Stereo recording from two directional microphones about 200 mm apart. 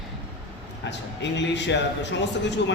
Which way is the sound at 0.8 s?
60° left (ahead or behind).